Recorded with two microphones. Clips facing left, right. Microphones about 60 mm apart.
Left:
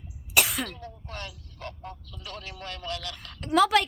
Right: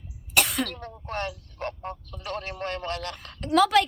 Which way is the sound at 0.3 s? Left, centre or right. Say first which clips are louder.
Right 1 dB; centre.